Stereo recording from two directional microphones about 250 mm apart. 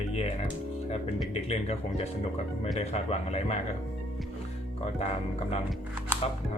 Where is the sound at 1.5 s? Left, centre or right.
Left.